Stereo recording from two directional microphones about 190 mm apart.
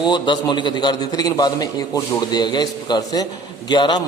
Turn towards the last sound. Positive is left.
turn(degrees=25)  # may be behind; listen again after turning